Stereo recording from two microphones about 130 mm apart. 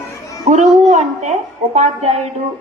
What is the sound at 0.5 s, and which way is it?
A woman's voice, 60° right (ahead or behind).